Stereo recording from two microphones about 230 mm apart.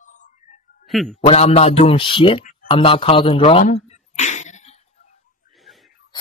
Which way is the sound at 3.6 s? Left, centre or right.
Left.